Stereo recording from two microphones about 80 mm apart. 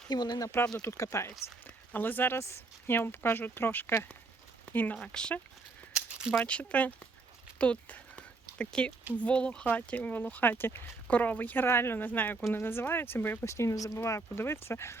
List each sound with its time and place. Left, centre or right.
0.1 s speech: left
0.8 s speech: left
1.6 s speech: left
4.9 s speech: centre
5.9 s rattle: centre
6.4 s speech: centre
7.6 s a sound: centre
9.1 s speech: centre; by 14.9 s left